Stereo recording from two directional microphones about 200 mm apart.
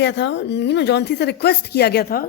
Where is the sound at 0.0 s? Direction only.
60° left (ahead or behind).